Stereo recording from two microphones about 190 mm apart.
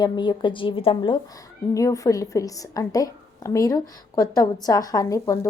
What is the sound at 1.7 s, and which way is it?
A woman's voice, 15° left (ahead or behind).